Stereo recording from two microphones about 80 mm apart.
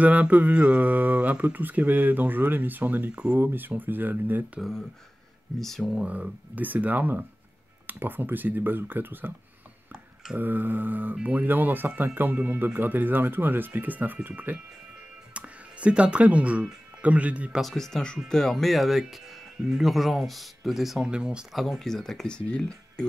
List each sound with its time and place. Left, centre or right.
0.0 s speech: centre
4.6 s speech: centre
5.9 s speech: centre
10.3 s speech: right
17.6 s speech: centre
21.5 s speech: centre